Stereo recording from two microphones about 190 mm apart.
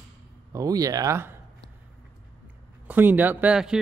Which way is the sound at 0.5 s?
20° right (ahead or behind).